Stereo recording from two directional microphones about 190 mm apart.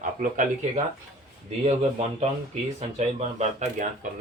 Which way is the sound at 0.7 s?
35° right (ahead or behind).